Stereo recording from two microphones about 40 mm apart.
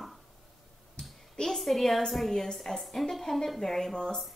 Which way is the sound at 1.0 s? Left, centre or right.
Left.